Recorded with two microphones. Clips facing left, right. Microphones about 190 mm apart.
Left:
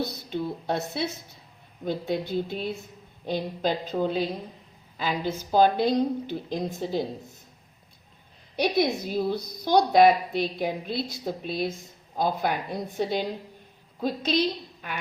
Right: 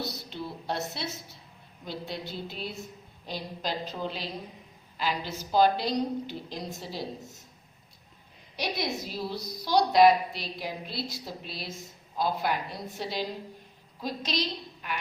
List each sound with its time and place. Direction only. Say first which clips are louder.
0.0 s a woman's voice: left 6 dB; 50° left (ahead or behind)
8.5 s a woman's voice: left 8 dB; 55° left (ahead or behind)